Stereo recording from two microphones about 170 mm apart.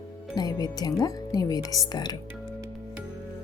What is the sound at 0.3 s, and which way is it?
Speech, 20° left (ahead or behind).